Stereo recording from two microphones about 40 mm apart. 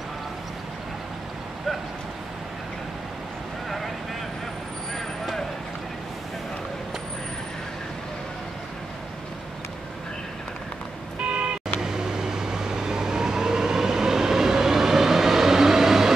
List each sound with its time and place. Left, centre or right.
4.9 s vehicle: centre
11.1 s vehicle: right
11.8 s vehicle: centre